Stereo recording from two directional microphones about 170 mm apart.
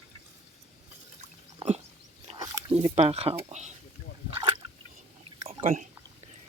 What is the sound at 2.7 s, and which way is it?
Speech, 35° right (ahead or behind).